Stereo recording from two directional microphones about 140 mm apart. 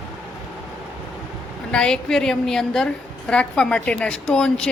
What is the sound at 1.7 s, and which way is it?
A woman's voice, 5° left (ahead or behind).